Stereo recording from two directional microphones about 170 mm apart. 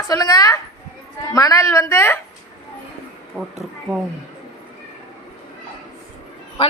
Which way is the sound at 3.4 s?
Centre (ahead or behind).